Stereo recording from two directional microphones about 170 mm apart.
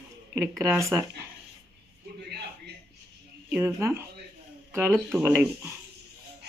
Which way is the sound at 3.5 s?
15° right (ahead or behind).